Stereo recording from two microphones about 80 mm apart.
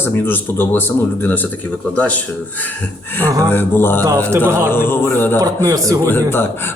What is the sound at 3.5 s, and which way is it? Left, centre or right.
Speech, left.